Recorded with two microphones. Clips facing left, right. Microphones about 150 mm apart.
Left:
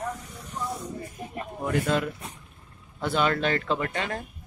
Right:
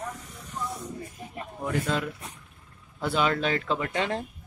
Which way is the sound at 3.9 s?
25° right (ahead or behind).